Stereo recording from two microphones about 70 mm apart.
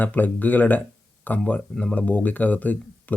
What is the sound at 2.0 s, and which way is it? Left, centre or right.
Speech, left.